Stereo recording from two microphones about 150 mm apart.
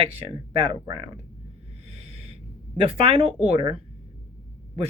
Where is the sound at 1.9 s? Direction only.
45° right (ahead or behind).